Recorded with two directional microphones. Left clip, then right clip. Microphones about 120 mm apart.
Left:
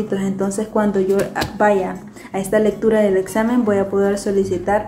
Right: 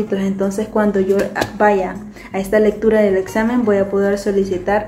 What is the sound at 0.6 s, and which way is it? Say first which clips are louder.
Speech: right 1 dB; 10° left (ahead or behind).